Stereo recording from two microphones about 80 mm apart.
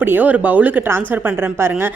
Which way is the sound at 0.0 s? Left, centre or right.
Right.